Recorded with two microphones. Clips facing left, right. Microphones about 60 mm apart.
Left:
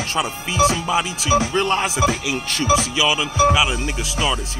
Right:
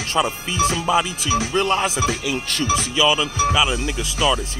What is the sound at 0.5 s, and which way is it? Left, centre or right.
Speech, centre.